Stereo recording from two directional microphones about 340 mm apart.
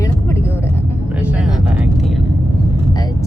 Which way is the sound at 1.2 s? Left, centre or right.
Centre.